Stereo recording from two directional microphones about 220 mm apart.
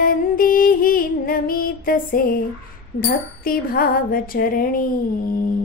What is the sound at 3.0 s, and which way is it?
Music, 40° left (ahead or behind).